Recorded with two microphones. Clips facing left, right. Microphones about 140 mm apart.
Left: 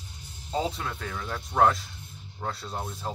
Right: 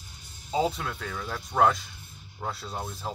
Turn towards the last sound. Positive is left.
turn(degrees=0)  # may be behind; listen again after turning